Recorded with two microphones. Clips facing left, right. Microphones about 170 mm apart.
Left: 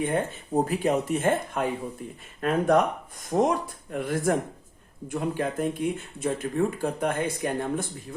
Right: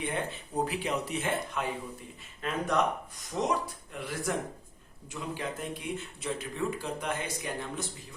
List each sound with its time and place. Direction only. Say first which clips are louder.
0.0 s speech: left 7 dB; 45° left (ahead or behind)